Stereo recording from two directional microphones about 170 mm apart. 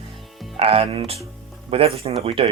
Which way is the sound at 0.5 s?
35° right (ahead or behind).